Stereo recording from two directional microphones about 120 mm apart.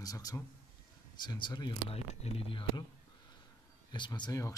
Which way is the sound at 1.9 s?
55° left (ahead or behind).